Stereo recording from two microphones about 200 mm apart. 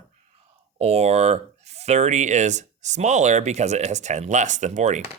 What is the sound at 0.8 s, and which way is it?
Speech, 30° right (ahead or behind).